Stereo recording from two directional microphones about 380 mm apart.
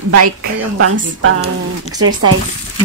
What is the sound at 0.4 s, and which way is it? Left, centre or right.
Speech, right.